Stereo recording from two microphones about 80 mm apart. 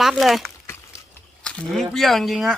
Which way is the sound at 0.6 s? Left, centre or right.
Left.